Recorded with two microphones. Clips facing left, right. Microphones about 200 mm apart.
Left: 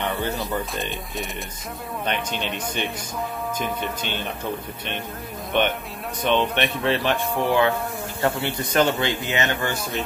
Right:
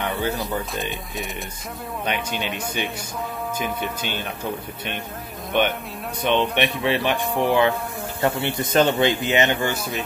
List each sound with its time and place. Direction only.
0.0 s music: 10° right (ahead or behind)
0.4 s a man's voice: centre (ahead or behind)
6.2 s a man's voice: 15° right (ahead or behind)